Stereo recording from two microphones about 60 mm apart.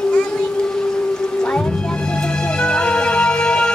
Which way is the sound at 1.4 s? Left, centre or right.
Centre.